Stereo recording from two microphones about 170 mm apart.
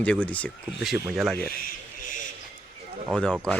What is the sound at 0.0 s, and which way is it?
Speech, 5° left (ahead or behind).